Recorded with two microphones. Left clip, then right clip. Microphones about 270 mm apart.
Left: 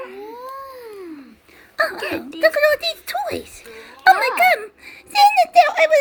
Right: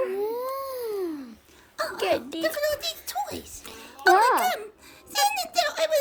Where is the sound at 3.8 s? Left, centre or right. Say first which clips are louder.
Left 5 dB; right.